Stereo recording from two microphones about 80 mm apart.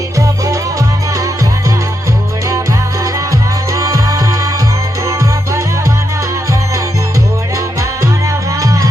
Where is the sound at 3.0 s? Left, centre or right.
Right.